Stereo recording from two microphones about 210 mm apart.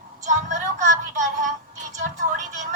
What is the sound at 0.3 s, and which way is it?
Music, 35° right (ahead or behind).